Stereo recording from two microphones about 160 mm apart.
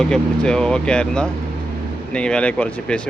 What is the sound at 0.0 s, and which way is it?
Speech, 5° left (ahead or behind).